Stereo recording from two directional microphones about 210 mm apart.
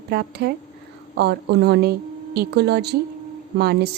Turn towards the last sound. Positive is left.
turn(degrees=-50)  # may be behind; listen again after turning